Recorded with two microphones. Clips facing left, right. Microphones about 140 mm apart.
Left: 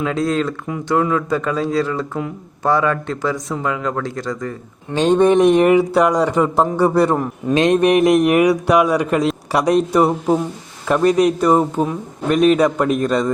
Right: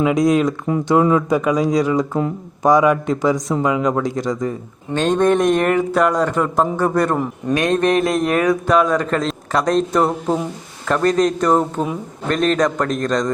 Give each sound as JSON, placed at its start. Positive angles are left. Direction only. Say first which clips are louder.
{"t": 0.0, "sound": "speech", "louder": "right 4 dB", "side_deg": -15}
{"t": 4.9, "sound": "a man's voice", "louder": "left 3 dB", "side_deg": 10}